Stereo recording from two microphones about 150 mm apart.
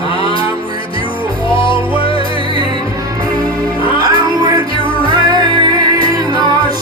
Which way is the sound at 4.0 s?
30° right (ahead or behind).